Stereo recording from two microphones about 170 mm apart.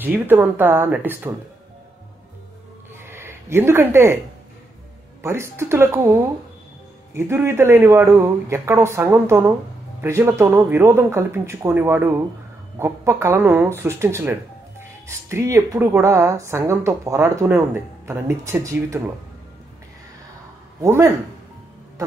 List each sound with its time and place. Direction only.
0.0 s speech: 10° right (ahead or behind)
3.0 s a sound: 15° right (ahead or behind)
5.2 s speech: 15° right (ahead or behind)
20.8 s speech: 20° right (ahead or behind)